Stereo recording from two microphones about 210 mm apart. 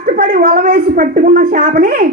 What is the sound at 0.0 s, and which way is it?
Speech, 40° right (ahead or behind).